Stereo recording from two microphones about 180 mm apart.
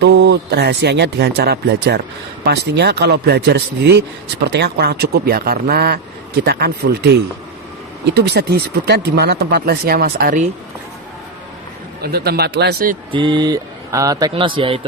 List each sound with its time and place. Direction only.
0.0 s a man's voice: 70° right (ahead or behind); by 10.5 s 50° right (ahead or behind)
12.0 s a man's voice: 60° right (ahead or behind)
13.1 s a man's voice: 25° right (ahead or behind)